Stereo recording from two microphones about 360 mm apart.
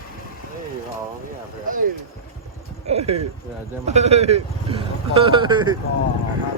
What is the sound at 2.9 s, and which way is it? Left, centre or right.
Speech, centre.